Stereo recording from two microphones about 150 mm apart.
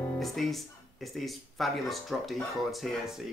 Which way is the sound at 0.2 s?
Centre (ahead or behind).